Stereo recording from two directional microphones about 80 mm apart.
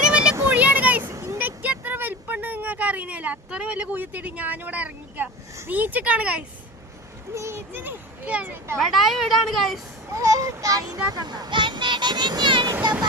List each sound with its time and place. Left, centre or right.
0.0 s a sound: centre
1.1 s vehicle: right
1.4 s vehicle: centre
5.7 s a child's voice: right
7.3 s a child's voice: right
8.8 s speech: centre
10.1 s a child's voice: right
12.8 s a child's voice: right